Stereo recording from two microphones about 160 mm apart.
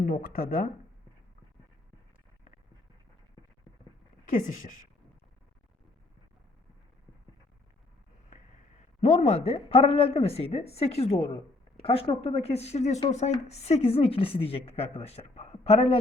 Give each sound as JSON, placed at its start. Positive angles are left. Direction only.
{"t": 0.0, "sound": "speech", "side_deg": 55}
{"t": 4.3, "sound": "a woman's voice", "side_deg": 50}
{"t": 9.0, "sound": "speech", "side_deg": 45}